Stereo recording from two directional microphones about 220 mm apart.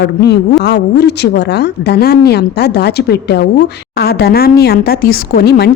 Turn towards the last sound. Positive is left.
turn(degrees=45)  # may be behind; listen again after turning